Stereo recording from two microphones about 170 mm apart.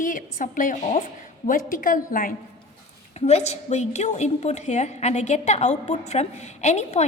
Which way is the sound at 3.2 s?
40° left (ahead or behind).